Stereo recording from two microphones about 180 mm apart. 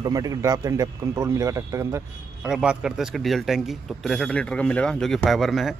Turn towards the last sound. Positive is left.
turn(degrees=0)  # may be behind; listen again after turning